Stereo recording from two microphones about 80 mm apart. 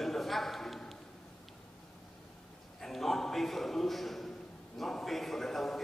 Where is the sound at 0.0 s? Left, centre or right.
Centre.